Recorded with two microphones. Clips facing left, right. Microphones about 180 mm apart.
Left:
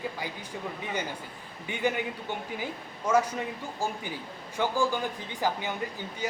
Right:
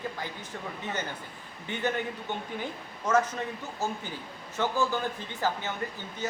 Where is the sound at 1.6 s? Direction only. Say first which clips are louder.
Left 1 dB; 10° left (ahead or behind).